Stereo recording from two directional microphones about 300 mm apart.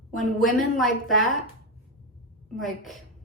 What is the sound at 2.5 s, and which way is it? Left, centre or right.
Speech, centre.